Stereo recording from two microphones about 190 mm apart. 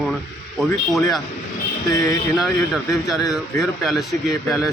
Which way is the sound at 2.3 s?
Centre (ahead or behind).